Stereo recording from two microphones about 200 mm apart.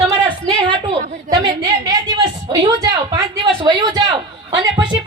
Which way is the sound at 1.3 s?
20° right (ahead or behind).